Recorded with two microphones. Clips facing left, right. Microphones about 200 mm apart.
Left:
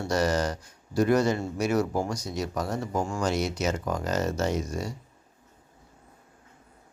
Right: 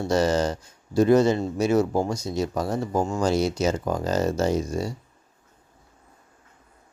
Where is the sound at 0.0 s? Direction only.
25° right (ahead or behind).